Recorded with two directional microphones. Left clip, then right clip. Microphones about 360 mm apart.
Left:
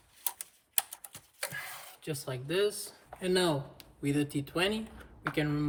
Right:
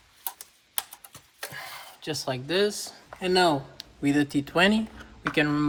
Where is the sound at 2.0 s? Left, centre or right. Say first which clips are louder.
Right 8 dB; centre.